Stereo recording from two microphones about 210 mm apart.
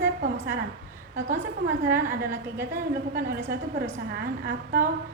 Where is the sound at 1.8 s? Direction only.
10° right (ahead or behind).